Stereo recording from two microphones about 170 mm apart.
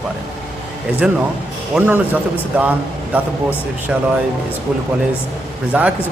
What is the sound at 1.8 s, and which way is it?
Speech, 10° right (ahead or behind).